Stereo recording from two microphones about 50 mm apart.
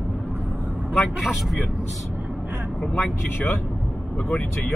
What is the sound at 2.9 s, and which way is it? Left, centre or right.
Speech, left.